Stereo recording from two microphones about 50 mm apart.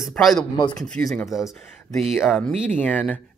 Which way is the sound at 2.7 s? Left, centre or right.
Left.